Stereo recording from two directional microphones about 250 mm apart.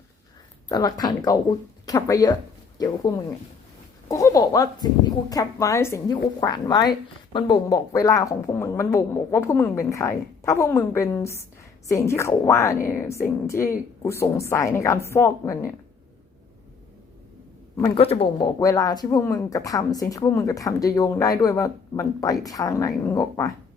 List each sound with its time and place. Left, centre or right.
0.7 s speech: centre
4.1 s speech: centre
17.7 s speech: centre